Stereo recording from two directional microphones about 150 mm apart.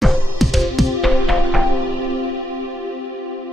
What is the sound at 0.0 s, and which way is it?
Music, centre (ahead or behind).